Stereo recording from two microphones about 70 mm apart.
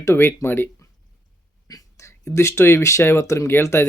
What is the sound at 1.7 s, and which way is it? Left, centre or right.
Whispering, left.